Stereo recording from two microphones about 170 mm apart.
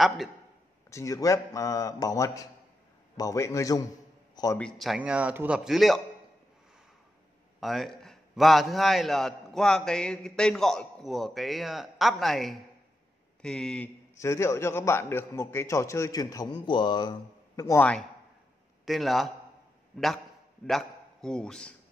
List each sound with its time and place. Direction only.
0.8 s a man's voice: 20° left (ahead or behind)
4.6 s a man's voice: 5° left (ahead or behind)
7.6 s a man's voice: centre (ahead or behind)
14.1 s a man's voice: 15° left (ahead or behind)
18.9 s a man's voice: centre (ahead or behind)
20.6 s a man's voice: 5° left (ahead or behind)